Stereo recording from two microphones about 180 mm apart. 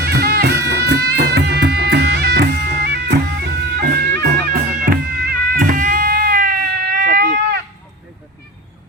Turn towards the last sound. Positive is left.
turn(degrees=-55)  # may be behind; listen again after turning